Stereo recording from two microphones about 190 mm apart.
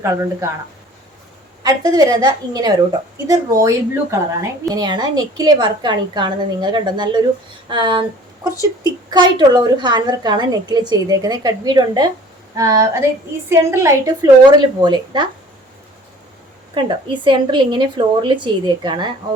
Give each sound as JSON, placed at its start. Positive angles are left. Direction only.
{"t": 0.0, "sound": "a woman's voice", "side_deg": -15}
{"t": 1.6, "sound": "a woman's voice", "side_deg": -20}
{"t": 8.4, "sound": "speech", "side_deg": 20}
{"t": 9.0, "sound": "a woman's voice", "side_deg": -25}
{"t": 16.7, "sound": "a woman's voice", "side_deg": -25}